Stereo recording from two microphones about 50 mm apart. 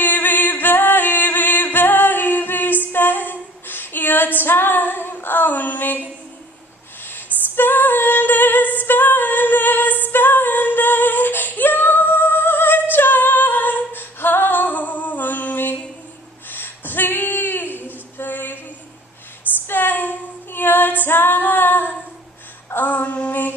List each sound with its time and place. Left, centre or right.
0.0 s music: left
2.9 s female singing: left
7.1 s female singing: left
16.4 s a sound: left
18.1 s female singing: left
19.7 s female singing: left